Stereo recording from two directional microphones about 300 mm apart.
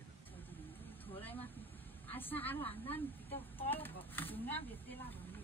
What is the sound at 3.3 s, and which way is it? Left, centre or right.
Speech, centre.